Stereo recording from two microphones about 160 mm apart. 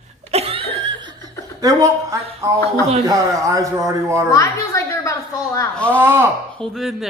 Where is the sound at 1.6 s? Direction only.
20° right (ahead or behind).